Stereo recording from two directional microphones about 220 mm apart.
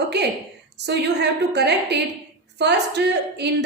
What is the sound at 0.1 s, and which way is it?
A woman's voice, 50° right (ahead or behind).